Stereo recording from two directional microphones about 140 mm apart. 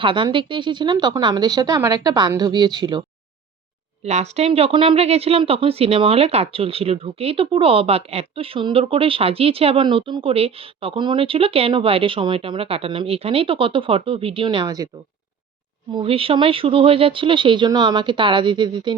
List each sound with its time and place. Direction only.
0.0 s speech: 35° right (ahead or behind)
4.0 s speech: 50° right (ahead or behind); by 14.8 s 30° right (ahead or behind)
16.0 s speech: 40° right (ahead or behind)